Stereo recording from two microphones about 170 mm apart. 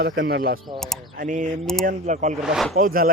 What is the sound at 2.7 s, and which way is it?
Speech, 60° right (ahead or behind).